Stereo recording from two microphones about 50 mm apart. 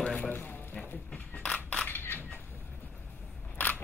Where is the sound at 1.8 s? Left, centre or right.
Left.